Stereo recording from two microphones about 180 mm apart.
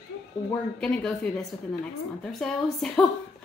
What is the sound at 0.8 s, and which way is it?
A woman's voice, 5° left (ahead or behind).